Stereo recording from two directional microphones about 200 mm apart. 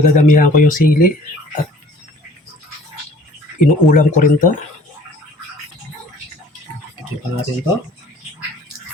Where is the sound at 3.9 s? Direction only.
40° left (ahead or behind).